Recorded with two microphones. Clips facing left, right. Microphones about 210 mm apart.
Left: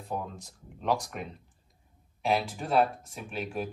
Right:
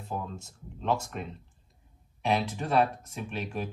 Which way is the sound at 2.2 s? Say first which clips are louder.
Even; 5° left (ahead or behind).